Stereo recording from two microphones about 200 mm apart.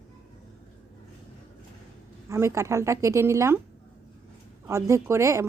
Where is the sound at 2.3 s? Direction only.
15° right (ahead or behind).